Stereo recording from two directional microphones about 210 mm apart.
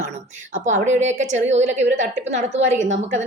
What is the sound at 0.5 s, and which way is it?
A woman's voice, 35° right (ahead or behind).